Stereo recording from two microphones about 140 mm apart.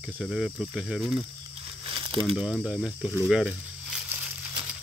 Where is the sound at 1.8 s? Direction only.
40° right (ahead or behind).